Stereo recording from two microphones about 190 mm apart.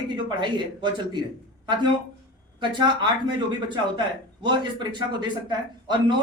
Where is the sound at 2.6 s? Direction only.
25° right (ahead or behind).